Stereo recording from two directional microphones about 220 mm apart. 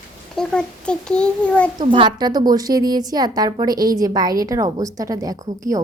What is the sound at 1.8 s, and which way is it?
A woman's voice, 20° right (ahead or behind).